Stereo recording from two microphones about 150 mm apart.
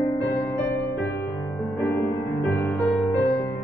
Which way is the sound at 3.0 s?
20° left (ahead or behind).